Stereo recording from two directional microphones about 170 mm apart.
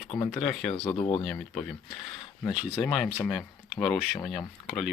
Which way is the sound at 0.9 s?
35° left (ahead or behind).